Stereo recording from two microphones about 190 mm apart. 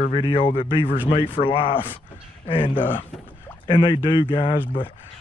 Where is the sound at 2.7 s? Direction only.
10° left (ahead or behind).